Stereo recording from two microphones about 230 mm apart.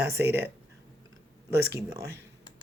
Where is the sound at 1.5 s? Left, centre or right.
Right.